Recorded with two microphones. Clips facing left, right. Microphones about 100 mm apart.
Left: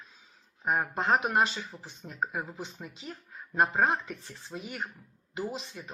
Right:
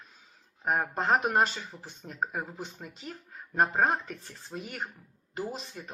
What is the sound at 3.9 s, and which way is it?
Speech, 45° right (ahead or behind).